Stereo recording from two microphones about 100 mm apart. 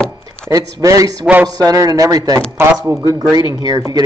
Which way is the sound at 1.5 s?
40° right (ahead or behind).